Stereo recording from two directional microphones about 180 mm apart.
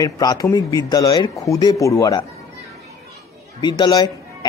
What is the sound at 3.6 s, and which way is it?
Speech, 25° left (ahead or behind).